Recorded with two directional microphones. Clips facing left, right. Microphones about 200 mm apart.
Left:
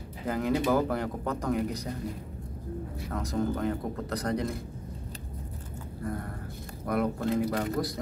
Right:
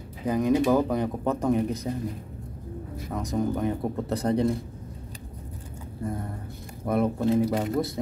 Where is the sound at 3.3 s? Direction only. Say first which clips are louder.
Right 3 dB; 20° right (ahead or behind).